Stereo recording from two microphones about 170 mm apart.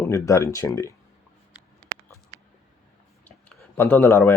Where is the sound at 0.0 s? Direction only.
20° left (ahead or behind).